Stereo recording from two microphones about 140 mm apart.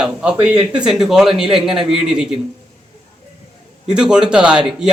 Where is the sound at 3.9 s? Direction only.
5° right (ahead or behind).